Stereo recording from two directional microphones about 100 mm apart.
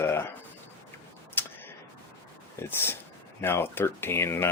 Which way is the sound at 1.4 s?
20° left (ahead or behind).